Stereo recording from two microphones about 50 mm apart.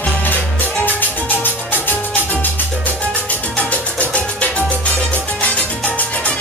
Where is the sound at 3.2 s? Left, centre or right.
Left.